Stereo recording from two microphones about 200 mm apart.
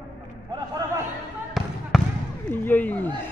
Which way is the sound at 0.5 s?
20° right (ahead or behind).